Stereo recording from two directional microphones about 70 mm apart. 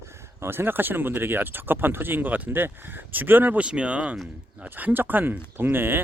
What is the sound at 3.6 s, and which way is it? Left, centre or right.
Speech, centre.